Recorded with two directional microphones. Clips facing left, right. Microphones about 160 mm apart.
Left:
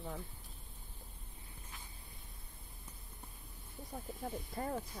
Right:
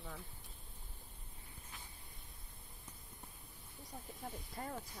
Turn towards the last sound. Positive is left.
turn(degrees=40)  # may be behind; listen again after turning